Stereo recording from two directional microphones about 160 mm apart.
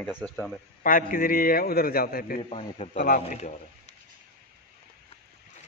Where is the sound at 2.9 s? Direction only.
60° left (ahead or behind).